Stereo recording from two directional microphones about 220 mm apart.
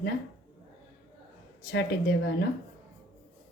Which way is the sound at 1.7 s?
50° left (ahead or behind).